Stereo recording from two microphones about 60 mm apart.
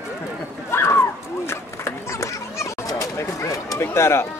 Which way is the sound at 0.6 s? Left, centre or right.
Left.